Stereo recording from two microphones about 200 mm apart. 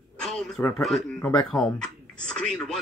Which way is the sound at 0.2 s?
5° left (ahead or behind).